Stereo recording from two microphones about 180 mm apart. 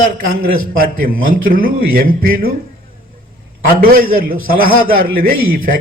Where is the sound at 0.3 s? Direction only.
50° right (ahead or behind).